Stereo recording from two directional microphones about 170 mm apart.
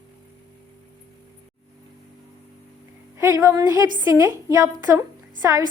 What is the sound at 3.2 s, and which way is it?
A woman's voice, 20° right (ahead or behind).